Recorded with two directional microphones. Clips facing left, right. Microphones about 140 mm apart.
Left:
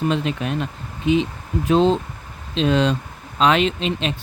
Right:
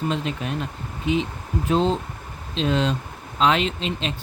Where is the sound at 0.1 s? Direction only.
80° left.